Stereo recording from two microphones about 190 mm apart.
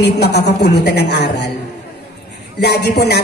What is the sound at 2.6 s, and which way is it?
Speech, 60° left (ahead or behind).